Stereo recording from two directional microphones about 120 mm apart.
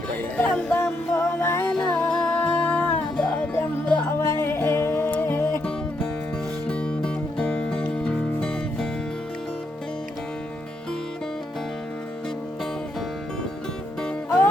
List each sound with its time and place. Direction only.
0.3 s music: 15° left (ahead or behind)
4.2 s music: 20° left (ahead or behind)
6.7 s music: 10° left (ahead or behind)